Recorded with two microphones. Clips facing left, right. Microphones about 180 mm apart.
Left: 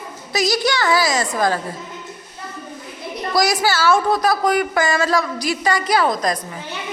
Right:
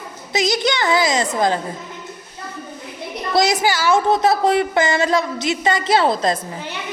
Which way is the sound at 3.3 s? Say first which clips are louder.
Right 1 dB; 20° right (ahead or behind).